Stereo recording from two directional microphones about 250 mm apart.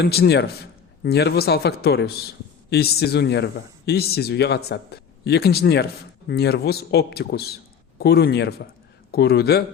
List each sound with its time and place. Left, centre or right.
0.0 s a man's voice: left